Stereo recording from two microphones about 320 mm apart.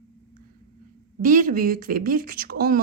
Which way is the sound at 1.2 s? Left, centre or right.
Right.